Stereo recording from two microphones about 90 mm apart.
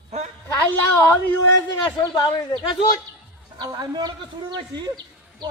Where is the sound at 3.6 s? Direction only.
50° right (ahead or behind).